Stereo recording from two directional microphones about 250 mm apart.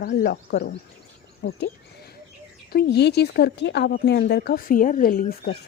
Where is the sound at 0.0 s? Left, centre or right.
Left.